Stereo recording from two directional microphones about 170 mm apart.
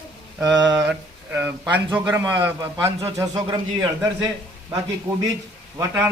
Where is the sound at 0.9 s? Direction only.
10° right (ahead or behind).